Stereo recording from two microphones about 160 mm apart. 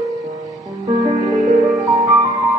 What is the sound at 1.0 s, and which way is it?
Music, 25° right (ahead or behind).